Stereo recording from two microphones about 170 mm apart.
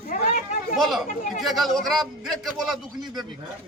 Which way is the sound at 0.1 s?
45° left (ahead or behind).